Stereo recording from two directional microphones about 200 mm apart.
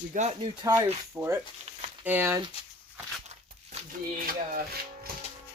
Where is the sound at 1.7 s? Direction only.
30° right (ahead or behind).